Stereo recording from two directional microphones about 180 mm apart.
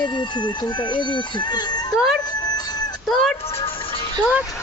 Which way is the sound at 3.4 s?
30° left (ahead or behind).